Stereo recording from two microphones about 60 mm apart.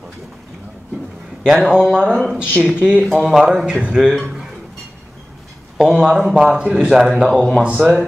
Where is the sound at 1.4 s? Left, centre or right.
Centre.